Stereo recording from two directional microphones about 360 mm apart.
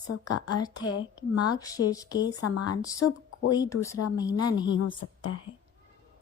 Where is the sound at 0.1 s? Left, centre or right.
Left.